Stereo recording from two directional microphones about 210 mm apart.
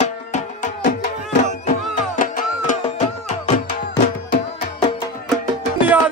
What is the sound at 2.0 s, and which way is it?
Music, 40° left (ahead or behind).